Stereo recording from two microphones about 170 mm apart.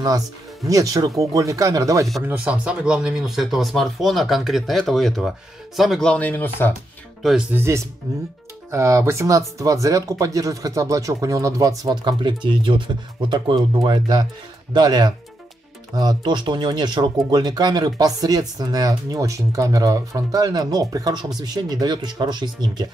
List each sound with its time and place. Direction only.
0.7 s speech: 20° right (ahead or behind)
2.2 s speech: 10° right (ahead or behind); by 6.7 s 10° left (ahead or behind)
7.5 s speech: 15° right (ahead or behind)